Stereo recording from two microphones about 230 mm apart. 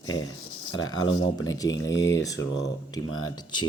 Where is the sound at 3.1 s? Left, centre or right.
Left.